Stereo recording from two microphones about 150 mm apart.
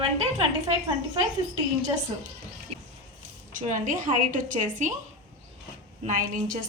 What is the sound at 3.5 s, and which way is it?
A woman's voice, 55° right (ahead or behind).